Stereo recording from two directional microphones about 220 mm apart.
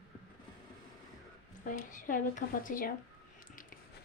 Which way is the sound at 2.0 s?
35° left (ahead or behind).